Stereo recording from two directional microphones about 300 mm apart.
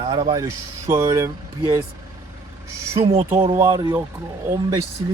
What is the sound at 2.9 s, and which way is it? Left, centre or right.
Speech, centre.